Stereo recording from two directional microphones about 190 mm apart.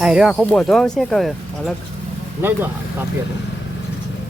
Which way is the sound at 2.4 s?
10° right (ahead or behind).